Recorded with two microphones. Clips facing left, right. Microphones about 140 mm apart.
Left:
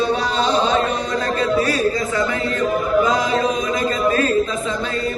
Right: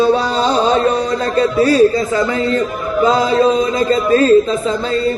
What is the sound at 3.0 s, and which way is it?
Chant, 30° right (ahead or behind).